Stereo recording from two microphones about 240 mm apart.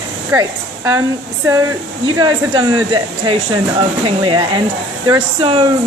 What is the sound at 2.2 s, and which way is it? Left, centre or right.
Speech, centre.